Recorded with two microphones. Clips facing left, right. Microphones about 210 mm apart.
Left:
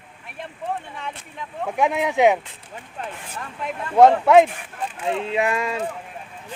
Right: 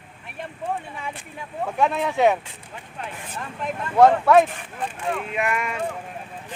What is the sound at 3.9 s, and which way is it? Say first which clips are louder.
Speech: left 2 dB; 20° left (ahead or behind).